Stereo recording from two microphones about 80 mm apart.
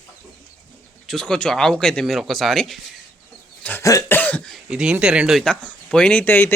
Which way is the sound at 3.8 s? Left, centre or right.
Left.